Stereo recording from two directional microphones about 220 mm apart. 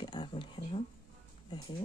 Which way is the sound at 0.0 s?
20° left (ahead or behind).